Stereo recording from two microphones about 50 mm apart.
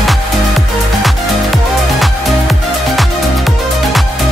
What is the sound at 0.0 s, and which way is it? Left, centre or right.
Music, centre.